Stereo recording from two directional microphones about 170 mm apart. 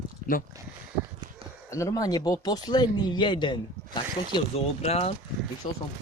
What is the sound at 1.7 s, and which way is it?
Speech, 20° left (ahead or behind).